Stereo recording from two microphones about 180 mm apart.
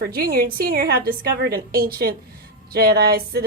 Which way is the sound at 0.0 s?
55° right (ahead or behind).